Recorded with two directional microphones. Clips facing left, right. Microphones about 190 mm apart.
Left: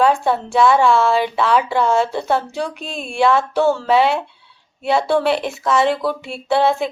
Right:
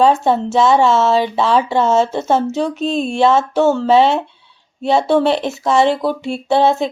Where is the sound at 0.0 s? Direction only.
20° right (ahead or behind).